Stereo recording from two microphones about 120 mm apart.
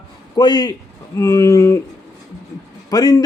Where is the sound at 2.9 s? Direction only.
30° left (ahead or behind).